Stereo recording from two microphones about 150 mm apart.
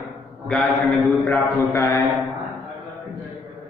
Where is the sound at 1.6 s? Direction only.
15° left (ahead or behind).